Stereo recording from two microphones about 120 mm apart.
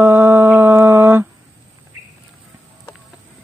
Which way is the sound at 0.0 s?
20° right (ahead or behind).